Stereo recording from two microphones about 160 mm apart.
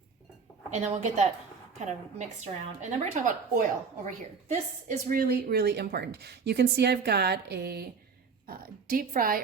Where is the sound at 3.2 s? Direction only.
55° right (ahead or behind).